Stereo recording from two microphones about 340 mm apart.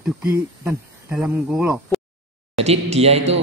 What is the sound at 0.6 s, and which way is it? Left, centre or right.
Speech, centre.